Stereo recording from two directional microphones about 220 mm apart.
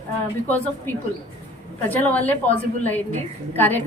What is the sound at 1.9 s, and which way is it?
A woman's voice, 5° left (ahead or behind).